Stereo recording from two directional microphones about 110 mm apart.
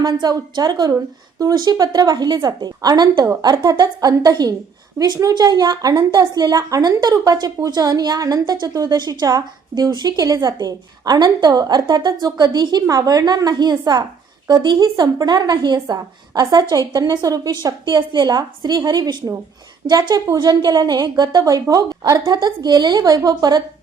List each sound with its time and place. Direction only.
0.0 s a woman's voice: 40° right (ahead or behind)